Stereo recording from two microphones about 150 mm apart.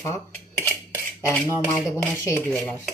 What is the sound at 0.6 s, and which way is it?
Cutlery, 15° left (ahead or behind).